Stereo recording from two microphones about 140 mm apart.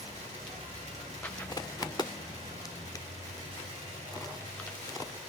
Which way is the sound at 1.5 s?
30° left (ahead or behind).